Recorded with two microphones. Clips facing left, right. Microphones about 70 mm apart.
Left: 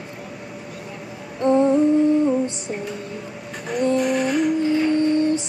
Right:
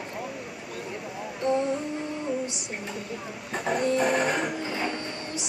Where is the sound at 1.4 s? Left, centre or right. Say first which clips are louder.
Left 7 dB; left.